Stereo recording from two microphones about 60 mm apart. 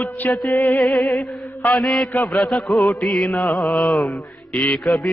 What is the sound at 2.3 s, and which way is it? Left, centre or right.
Music, centre.